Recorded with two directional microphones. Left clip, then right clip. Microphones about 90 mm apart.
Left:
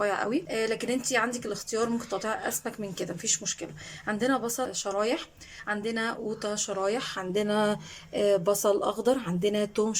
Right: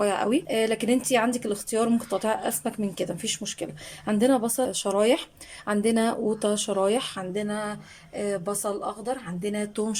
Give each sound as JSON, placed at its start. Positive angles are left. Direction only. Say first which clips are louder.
{"t": 0.0, "sound": "speech", "louder": "right 4 dB", "side_deg": -20}
{"t": 4.7, "sound": "speech", "louder": "right 7 dB", "side_deg": -40}
{"t": 7.3, "sound": "a sound", "louder": "left 4 dB", "side_deg": 15}
{"t": 7.6, "sound": "speech", "louder": "left 5 dB", "side_deg": 20}
{"t": 8.8, "sound": "speech", "louder": "left 4 dB", "side_deg": 30}